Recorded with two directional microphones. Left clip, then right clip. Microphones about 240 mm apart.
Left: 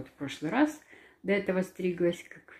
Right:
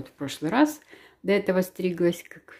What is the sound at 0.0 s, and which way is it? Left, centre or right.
Speech, right.